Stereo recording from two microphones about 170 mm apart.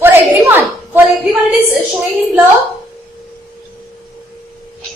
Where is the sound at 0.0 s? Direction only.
10° right (ahead or behind).